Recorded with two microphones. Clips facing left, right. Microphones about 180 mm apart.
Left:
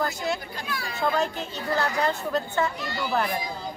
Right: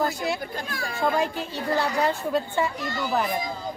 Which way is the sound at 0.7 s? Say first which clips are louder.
Right 1 dB; 45° right (ahead or behind).